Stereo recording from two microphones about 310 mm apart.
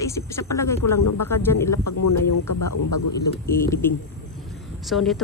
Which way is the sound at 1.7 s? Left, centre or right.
Left.